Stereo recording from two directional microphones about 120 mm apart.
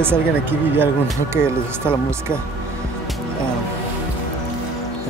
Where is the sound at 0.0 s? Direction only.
20° right (ahead or behind).